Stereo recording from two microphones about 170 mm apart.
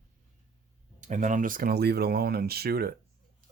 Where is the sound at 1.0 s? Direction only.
45° right (ahead or behind); by 2.9 s 65° right (ahead or behind).